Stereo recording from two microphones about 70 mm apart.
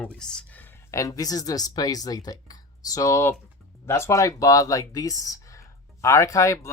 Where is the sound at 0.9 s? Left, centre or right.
Left.